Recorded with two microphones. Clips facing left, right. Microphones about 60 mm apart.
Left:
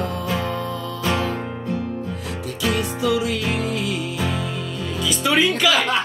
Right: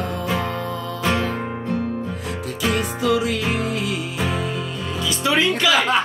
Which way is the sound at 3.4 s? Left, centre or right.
Centre.